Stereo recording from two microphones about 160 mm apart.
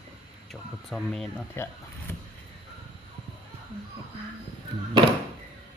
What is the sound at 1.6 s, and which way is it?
Speech, 15° left (ahead or behind).